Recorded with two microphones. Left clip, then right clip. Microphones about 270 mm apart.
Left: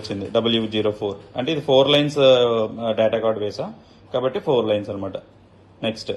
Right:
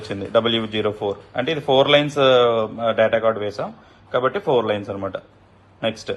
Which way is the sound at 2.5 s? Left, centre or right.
Right.